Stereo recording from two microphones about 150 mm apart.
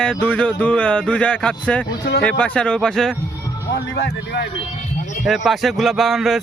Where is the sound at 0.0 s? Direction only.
5° left (ahead or behind).